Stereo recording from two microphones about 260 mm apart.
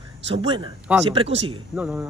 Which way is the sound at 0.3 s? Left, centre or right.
Centre.